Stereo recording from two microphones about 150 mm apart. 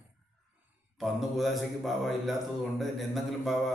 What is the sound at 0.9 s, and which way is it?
A man's voice, centre (ahead or behind).